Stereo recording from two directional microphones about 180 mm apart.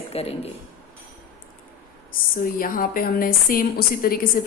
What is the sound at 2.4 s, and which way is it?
A woman's voice, 50° left (ahead or behind).